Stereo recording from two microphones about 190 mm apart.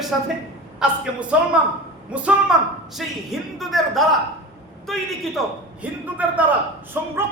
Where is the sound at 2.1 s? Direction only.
5° right (ahead or behind).